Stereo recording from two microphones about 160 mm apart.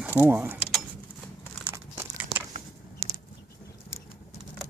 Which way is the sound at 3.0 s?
90° right.